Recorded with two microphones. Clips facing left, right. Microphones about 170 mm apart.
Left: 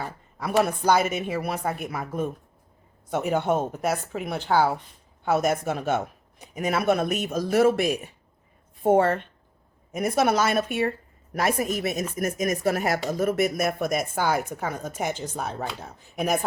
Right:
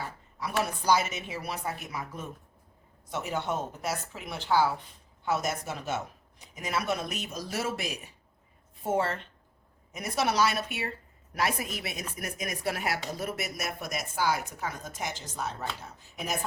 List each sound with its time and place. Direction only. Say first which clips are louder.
0.3 s a woman's voice: left 8 dB; 55° left (ahead or behind)